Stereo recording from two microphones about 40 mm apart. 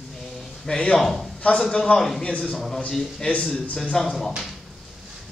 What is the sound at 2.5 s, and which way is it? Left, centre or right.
Speech, centre.